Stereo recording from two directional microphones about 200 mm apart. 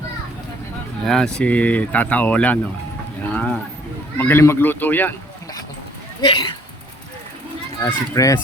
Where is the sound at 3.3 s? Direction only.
5° left (ahead or behind).